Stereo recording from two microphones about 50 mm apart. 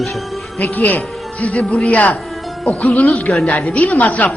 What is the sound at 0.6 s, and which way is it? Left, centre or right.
Speech, left.